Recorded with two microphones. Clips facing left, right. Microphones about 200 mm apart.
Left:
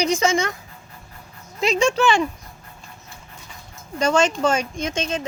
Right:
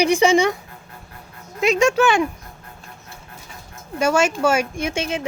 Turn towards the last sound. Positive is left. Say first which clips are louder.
# right 1 dB
turn(degrees=-10)  # may be behind; listen again after turning